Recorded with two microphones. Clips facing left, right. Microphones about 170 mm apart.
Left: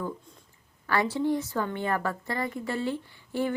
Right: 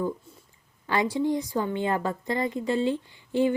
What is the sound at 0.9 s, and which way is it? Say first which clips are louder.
A woman's voice: right 1 dB; 15° right (ahead or behind).